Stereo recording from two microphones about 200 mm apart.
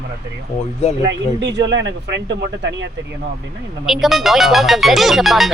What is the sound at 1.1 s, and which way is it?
Speech, 60° right (ahead or behind).